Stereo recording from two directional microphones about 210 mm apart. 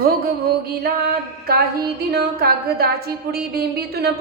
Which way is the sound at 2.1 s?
50° right (ahead or behind).